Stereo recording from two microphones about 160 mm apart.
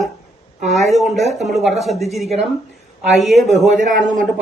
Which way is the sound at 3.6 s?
50° right (ahead or behind).